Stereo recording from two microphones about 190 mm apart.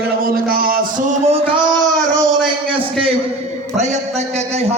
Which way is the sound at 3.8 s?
35° right (ahead or behind).